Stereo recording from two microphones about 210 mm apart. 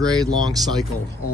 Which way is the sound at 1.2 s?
90° left.